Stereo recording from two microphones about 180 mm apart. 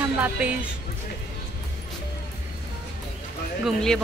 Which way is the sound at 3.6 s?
Centre (ahead or behind).